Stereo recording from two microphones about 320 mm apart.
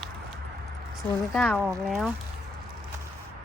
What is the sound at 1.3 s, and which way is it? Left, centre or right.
Speech, centre.